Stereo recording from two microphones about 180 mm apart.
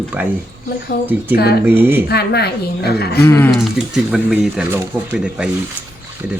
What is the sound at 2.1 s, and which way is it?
A woman's voice, 65° left (ahead or behind).